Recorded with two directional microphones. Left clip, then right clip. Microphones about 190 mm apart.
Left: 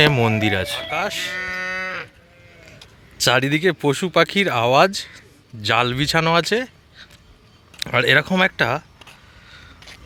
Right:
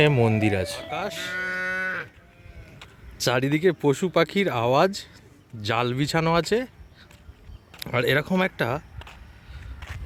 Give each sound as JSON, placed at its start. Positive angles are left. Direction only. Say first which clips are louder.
{"t": 0.0, "sound": "speech", "louder": "left 4 dB", "side_deg": 0}
{"t": 1.4, "sound": "moo", "louder": "left 2 dB", "side_deg": 40}
{"t": 3.2, "sound": "speech", "louder": "left 6 dB", "side_deg": 0}
{"t": 7.8, "sound": "a sound", "louder": "left 7 dB", "side_deg": 0}